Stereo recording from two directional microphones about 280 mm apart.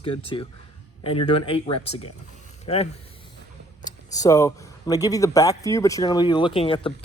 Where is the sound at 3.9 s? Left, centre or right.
Centre.